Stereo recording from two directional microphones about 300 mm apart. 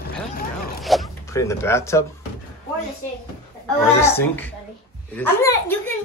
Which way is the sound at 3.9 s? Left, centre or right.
Centre.